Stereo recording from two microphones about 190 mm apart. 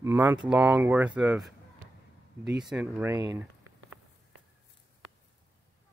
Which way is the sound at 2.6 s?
5° right (ahead or behind).